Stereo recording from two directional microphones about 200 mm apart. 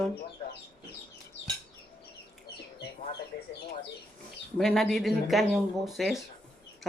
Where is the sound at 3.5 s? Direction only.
55° left (ahead or behind).